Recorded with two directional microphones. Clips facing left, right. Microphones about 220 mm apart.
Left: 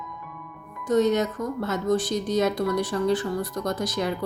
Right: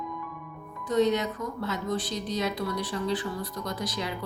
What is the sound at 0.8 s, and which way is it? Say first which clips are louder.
Speech: left 3 dB; 45° left (ahead or behind).